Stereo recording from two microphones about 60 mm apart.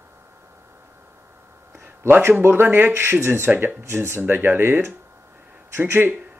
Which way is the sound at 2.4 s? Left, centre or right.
Right.